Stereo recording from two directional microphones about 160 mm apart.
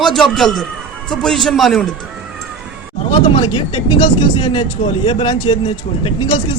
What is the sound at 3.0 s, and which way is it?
A man's voice, 35° left (ahead or behind).